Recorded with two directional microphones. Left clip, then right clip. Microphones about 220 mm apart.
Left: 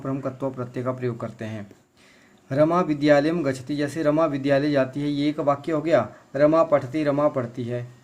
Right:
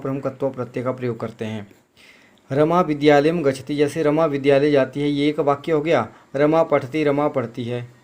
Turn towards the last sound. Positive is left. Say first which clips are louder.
# right 3 dB
turn(degrees=-15)  # may be behind; listen again after turning